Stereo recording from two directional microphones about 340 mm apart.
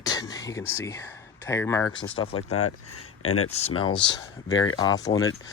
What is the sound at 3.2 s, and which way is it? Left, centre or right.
Speech, left.